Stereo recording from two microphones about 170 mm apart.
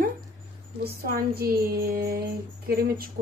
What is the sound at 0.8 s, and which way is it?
Speech, 65° right (ahead or behind).